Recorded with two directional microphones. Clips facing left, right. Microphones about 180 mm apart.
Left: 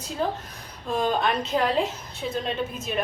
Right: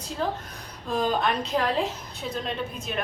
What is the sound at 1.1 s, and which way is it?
A woman's voice, centre (ahead or behind).